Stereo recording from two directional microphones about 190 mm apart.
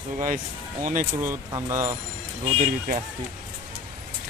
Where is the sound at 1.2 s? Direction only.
15° right (ahead or behind).